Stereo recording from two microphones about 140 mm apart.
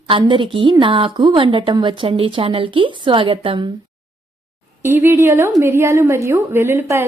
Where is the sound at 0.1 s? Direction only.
35° right (ahead or behind).